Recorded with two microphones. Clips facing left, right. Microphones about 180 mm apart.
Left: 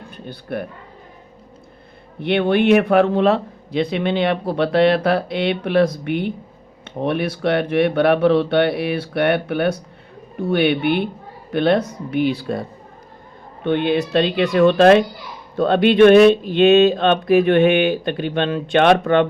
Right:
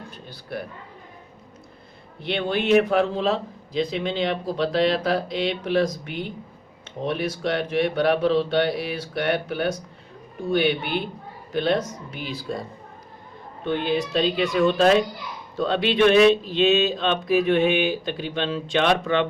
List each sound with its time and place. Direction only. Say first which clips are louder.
0.1 s a man's voice: left 8 dB; 55° left (ahead or behind)
2.2 s speech: left 8 dB; 60° left (ahead or behind)
13.7 s speech: left 6 dB; 65° left (ahead or behind)